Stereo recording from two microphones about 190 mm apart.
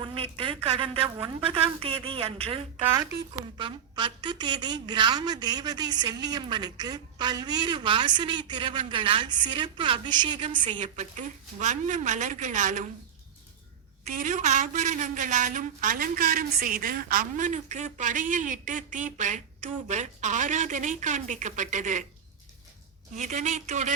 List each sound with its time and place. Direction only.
0.0 s a sound: 25° right (ahead or behind)
1.5 s a woman's voice: 30° right (ahead or behind)
10.7 s a woman's voice: 40° right (ahead or behind)
14.0 s a woman's voice: 40° right (ahead or behind)
23.1 s a woman's voice: 40° right (ahead or behind)